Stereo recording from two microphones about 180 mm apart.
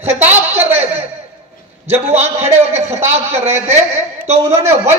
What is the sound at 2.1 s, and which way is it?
A man's voice, 15° right (ahead or behind).